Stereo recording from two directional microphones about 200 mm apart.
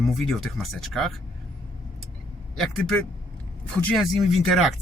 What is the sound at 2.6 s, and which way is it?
Speech, 5° left (ahead or behind).